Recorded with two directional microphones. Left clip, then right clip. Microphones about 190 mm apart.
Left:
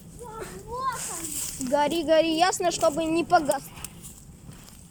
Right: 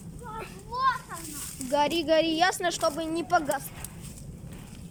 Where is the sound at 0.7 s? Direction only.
20° left (ahead or behind).